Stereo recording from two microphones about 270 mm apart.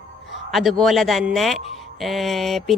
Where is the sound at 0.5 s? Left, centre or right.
Centre.